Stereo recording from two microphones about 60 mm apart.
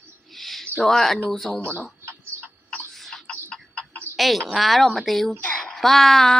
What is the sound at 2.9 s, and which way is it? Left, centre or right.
Tick-tock, centre.